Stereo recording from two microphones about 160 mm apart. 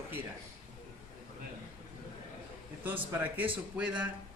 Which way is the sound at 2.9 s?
10° right (ahead or behind).